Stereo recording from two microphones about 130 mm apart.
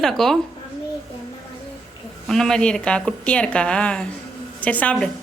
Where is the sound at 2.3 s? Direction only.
5° left (ahead or behind).